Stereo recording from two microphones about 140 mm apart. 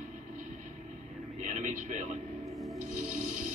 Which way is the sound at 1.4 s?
60° right (ahead or behind).